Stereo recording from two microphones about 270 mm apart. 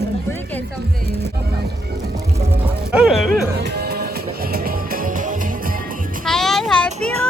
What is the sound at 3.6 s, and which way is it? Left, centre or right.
Music, right.